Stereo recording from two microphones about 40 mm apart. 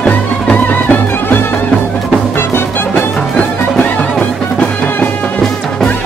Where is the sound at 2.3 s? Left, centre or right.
Left.